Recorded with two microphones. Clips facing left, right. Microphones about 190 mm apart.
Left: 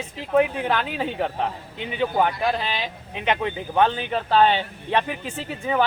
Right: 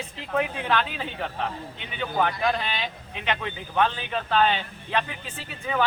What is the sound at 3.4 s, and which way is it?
Speech, 20° left (ahead or behind).